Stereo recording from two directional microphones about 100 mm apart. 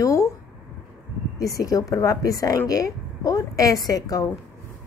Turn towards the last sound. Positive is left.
turn(degrees=40)  # may be behind; listen again after turning